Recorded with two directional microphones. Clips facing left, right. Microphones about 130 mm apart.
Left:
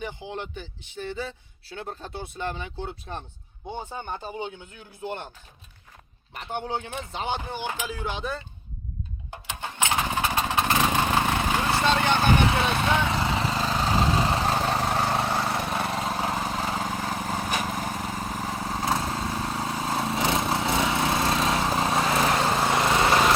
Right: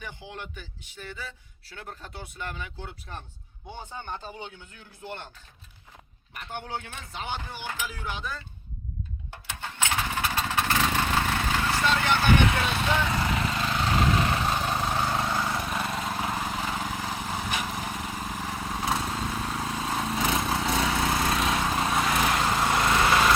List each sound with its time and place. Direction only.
0.0 s a man's voice: 20° left (ahead or behind)
3.9 s speech: 15° left (ahead or behind)
6.3 s a man's voice: 20° left (ahead or behind)
9.3 s motorcycle: 15° left (ahead or behind)
12.9 s lawn mower: 20° left (ahead or behind)